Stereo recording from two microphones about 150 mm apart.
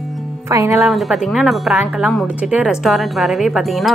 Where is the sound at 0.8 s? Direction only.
Centre (ahead or behind).